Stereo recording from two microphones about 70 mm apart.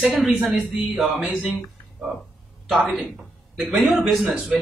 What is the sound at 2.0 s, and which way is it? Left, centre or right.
Speech, centre.